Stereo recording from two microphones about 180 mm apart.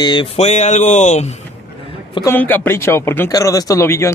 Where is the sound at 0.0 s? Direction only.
25° left (ahead or behind).